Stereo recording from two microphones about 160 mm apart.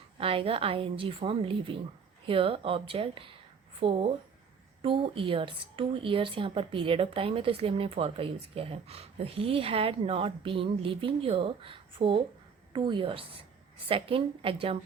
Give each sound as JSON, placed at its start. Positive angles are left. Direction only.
{"t": 0.2, "sound": "a woman's voice", "side_deg": -35}